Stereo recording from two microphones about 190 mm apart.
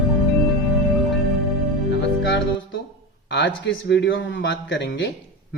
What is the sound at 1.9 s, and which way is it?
Music, 65° left (ahead or behind).